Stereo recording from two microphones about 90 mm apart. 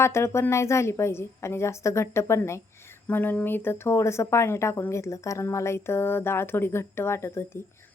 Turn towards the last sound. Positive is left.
turn(degrees=30)  # may be behind; listen again after turning